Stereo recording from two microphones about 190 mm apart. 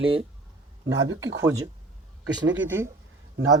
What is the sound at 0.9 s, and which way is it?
Speech, 85° right.